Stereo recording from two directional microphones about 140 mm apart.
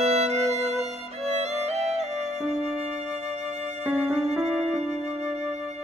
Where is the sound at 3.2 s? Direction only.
50° right (ahead or behind).